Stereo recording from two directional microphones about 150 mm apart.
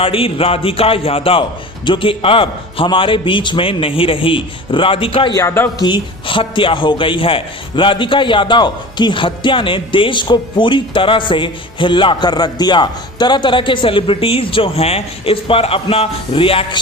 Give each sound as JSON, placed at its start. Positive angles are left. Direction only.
{"t": 0.0, "sound": "a man's voice", "side_deg": 40}
{"t": 5.3, "sound": "a man's voice", "side_deg": 20}
{"t": 5.8, "sound": "a man's voice", "side_deg": 30}